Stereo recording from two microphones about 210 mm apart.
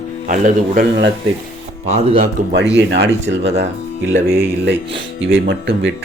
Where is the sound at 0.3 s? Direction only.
40° right (ahead or behind).